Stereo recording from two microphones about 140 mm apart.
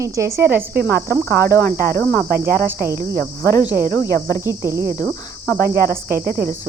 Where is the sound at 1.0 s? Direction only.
20° left (ahead or behind).